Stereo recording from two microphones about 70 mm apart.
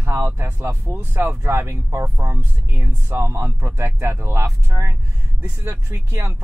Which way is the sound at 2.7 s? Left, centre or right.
Right.